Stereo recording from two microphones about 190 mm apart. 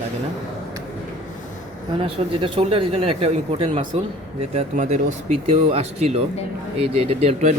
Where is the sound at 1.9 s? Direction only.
25° right (ahead or behind).